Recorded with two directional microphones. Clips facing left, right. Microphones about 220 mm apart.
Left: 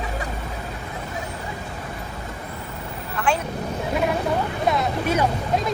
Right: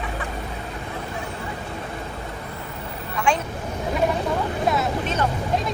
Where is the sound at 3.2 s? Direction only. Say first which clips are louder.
Right 1 dB; 5° left (ahead or behind).